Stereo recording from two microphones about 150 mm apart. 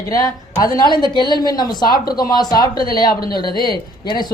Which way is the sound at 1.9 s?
90° left.